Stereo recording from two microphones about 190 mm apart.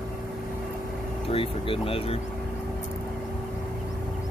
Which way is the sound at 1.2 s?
30° left (ahead or behind).